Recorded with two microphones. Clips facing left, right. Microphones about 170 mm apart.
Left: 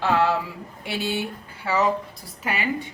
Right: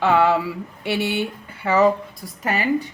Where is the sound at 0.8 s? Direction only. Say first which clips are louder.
Right 5 dB; 65° right (ahead or behind).